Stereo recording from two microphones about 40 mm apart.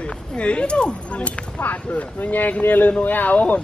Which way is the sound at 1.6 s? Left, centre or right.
Left.